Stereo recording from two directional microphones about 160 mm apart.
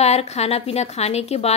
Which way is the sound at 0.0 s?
40° left (ahead or behind).